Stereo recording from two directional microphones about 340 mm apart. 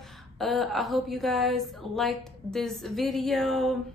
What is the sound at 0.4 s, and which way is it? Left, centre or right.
A woman's voice, centre.